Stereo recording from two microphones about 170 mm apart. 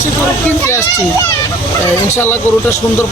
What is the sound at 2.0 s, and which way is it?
Speech, 15° left (ahead or behind).